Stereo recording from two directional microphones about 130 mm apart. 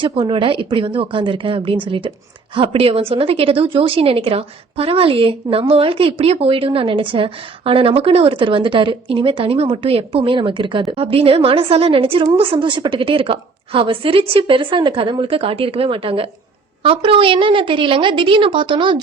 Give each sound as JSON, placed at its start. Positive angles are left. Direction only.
{"t": 0.0, "sound": "a woman's voice", "side_deg": -40}